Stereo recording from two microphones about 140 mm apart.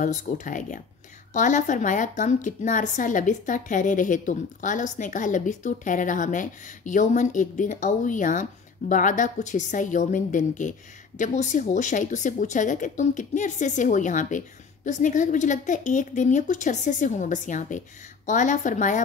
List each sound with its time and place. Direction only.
0.0 s a woman's voice: 65° left (ahead or behind)